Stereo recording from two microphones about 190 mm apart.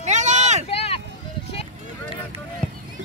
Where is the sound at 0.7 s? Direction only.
30° left (ahead or behind).